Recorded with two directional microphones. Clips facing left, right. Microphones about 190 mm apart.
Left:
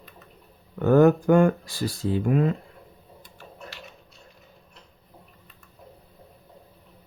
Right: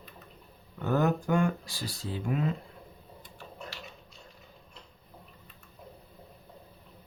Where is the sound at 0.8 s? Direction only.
55° left (ahead or behind).